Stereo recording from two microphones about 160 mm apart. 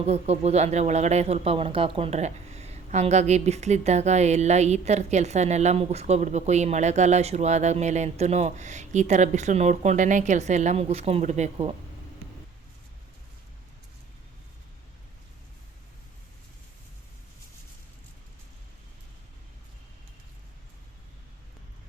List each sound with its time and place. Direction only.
0.0 s speech: 40° right (ahead or behind)